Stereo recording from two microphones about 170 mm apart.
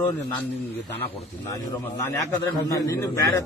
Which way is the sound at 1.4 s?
15° left (ahead or behind).